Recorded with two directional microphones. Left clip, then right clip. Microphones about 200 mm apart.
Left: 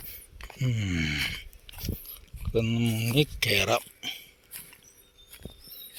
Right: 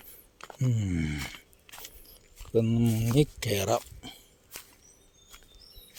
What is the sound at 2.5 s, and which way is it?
Speech, 30° right (ahead or behind).